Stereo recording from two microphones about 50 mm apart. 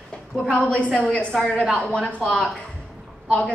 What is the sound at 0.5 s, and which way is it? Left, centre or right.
A woman's voice, left.